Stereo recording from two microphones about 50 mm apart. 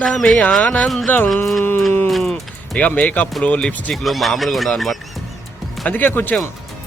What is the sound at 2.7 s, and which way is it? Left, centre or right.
Speech, left.